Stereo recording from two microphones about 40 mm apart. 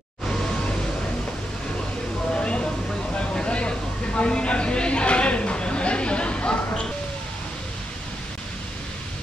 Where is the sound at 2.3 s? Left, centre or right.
Left.